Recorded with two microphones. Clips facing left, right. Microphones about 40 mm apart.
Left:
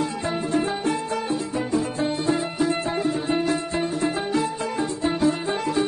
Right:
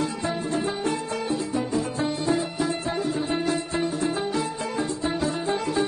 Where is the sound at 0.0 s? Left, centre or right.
Left.